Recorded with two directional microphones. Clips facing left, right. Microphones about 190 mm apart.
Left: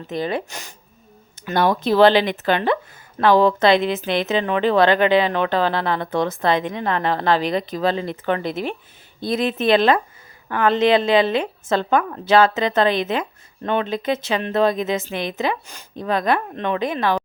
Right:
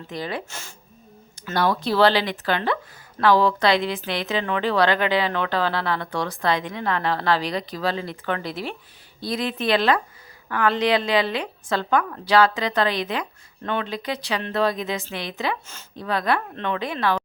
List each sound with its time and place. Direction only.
0.1 s a woman's voice: 20° left (ahead or behind)